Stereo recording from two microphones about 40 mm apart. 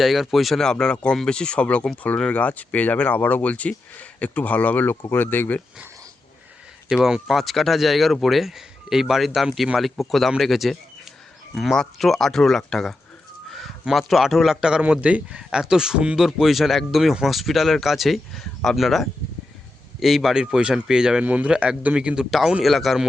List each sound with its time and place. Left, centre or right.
0.0 s speech: centre
0.6 s speech: centre
1.8 s speech: centre
2.3 s speech: left
7.3 s speech: centre
13.5 s a sound: centre
13.9 s a man's voice: centre
14.8 s speech: right
15.5 s a man's voice: centre
18.3 s a man's voice: centre
21.2 s a man's voice: right
22.6 s speech: centre